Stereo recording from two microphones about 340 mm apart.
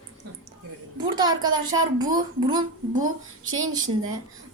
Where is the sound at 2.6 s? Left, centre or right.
Right.